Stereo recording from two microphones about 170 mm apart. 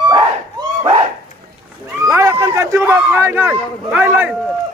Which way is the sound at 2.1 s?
15° right (ahead or behind).